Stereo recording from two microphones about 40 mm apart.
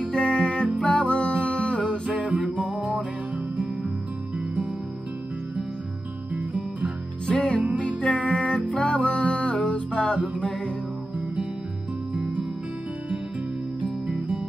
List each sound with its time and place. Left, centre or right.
0.1 s music: left
2.2 s music: right
2.7 s music: right
6.3 s music: right
7.2 s music: left
12.1 s music: right
13.8 s music: right